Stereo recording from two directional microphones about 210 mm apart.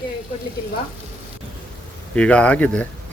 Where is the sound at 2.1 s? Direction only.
5° left (ahead or behind).